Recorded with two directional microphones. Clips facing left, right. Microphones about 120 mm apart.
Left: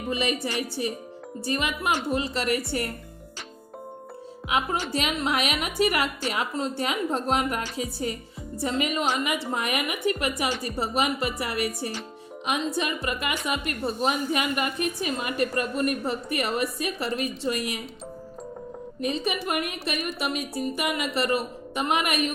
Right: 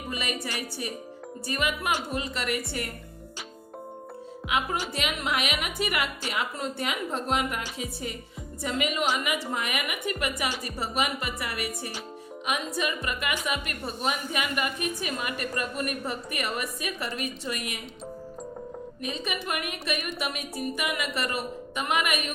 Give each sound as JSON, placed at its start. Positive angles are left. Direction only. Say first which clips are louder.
{"t": 0.1, "sound": "a woman's voice", "louder": "left 6 dB", "side_deg": 30}
{"t": 4.4, "sound": "a woman's voice", "louder": "left 2 dB", "side_deg": 35}
{"t": 19.0, "sound": "a woman's voice", "louder": "left 5 dB", "side_deg": 35}